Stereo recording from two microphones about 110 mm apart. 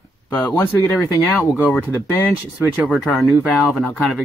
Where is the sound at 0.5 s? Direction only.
30° left (ahead or behind).